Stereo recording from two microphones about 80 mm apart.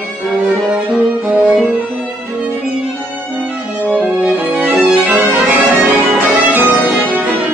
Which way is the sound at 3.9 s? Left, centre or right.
Right.